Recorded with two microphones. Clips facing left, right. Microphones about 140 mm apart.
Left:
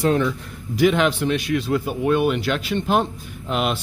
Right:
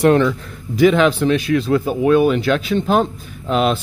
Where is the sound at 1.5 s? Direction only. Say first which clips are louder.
Right 5 dB; 90° right.